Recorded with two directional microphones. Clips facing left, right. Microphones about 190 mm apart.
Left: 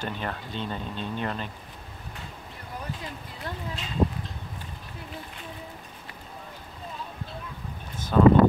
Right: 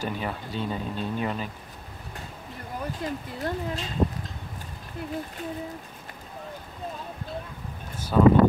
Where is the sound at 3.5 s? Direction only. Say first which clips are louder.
Right 7 dB; 50° right (ahead or behind).